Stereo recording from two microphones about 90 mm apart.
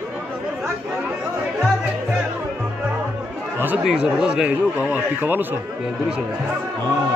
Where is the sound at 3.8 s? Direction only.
10° right (ahead or behind).